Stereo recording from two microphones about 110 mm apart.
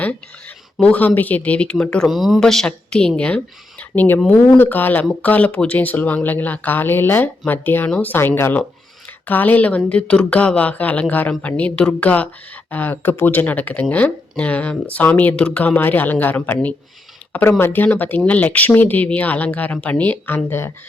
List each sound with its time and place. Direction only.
0.0 s speech: 10° left (ahead or behind)